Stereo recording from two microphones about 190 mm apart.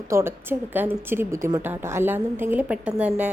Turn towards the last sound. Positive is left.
turn(degrees=-5)  # may be behind; listen again after turning